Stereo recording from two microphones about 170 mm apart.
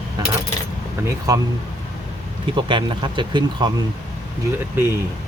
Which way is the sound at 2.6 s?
30° right (ahead or behind).